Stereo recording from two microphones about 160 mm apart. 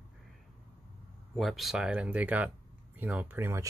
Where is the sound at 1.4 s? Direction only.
Centre (ahead or behind).